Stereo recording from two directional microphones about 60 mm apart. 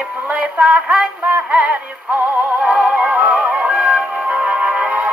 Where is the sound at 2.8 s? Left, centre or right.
Right.